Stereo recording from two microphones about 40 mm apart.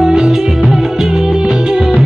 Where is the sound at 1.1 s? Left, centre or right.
Right.